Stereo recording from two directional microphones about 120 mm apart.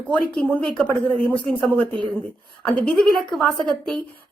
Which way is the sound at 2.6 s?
5° left (ahead or behind).